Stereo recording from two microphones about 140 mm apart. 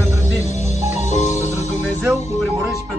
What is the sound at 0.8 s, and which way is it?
Music, 55° left (ahead or behind).